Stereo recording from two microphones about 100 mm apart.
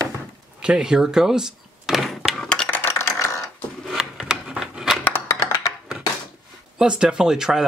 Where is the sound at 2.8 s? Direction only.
25° left (ahead or behind).